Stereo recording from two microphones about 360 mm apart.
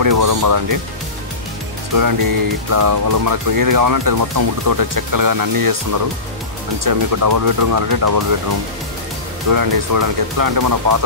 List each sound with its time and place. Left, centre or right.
0.0 s speech: right
2.0 s speech: right